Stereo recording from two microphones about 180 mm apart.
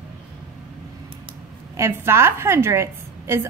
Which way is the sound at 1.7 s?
15° right (ahead or behind).